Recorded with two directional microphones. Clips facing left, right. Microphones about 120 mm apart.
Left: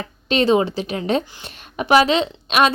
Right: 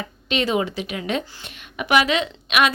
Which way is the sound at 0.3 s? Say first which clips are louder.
Left 6 dB; 30° left (ahead or behind).